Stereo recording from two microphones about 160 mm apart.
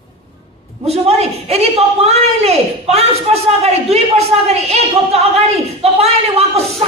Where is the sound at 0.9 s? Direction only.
40° right (ahead or behind).